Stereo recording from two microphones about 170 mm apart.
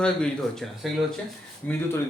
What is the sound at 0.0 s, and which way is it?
A man's voice, 5° left (ahead or behind).